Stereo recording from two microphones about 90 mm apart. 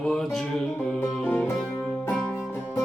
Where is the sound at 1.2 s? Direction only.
20° left (ahead or behind).